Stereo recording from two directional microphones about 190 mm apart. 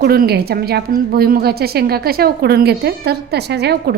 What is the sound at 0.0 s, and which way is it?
A woman's voice, 55° right (ahead or behind).